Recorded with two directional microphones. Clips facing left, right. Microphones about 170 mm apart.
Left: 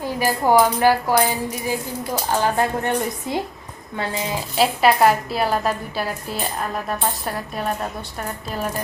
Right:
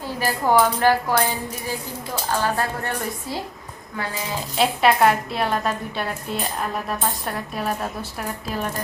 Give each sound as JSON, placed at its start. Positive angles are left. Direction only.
{"t": 0.0, "sound": "speech", "side_deg": 15}
{"t": 4.5, "sound": "a woman's voice", "side_deg": 0}